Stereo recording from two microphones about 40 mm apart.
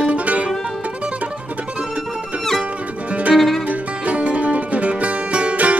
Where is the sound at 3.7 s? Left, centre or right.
Right.